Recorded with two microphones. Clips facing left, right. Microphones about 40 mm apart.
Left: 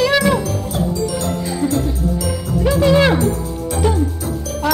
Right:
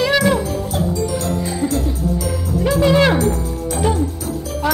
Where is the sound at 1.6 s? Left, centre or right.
Centre.